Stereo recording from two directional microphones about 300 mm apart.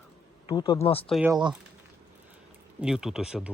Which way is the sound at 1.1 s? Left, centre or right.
Centre.